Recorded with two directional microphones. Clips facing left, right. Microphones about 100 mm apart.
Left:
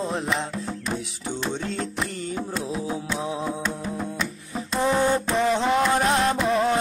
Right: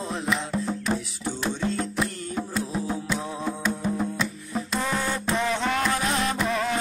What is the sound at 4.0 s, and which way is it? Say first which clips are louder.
Music: right 2 dB; 5° right (ahead or behind).